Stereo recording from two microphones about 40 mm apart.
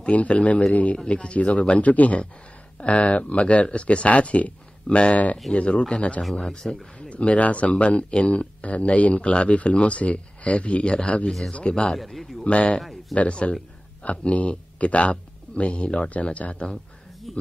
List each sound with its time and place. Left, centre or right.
0.0 s speech: left
1.8 s speech: left; by 6.8 s centre
7.0 s speech: left
11.2 s speech: centre
11.5 s speech: left
12.0 s a man's voice: centre
12.4 s speech: left
17.3 s speech: centre